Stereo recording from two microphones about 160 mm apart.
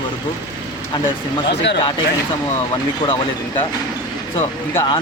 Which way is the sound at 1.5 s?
90° left.